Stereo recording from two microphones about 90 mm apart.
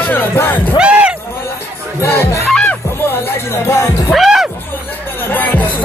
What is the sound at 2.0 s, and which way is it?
Music, 30° left (ahead or behind).